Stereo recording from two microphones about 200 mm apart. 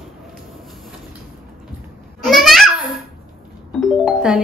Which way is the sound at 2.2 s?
Centre (ahead or behind).